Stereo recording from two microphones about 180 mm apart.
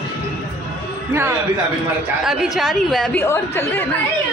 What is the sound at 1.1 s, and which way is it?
Speech, 15° right (ahead or behind).